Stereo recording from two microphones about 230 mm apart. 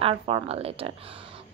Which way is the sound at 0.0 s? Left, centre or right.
Right.